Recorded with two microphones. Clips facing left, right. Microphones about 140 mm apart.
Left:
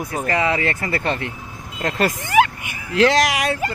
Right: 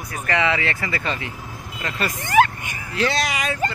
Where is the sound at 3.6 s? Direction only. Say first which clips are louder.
Even; 10° left (ahead or behind).